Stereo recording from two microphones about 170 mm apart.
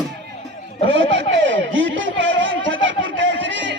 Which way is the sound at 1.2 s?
90° right.